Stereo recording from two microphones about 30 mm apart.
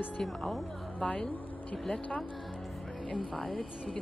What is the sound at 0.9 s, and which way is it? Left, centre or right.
Speech, left.